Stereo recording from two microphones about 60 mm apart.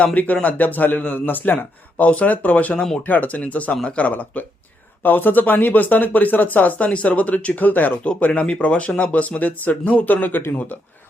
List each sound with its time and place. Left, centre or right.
0.0 s speech: left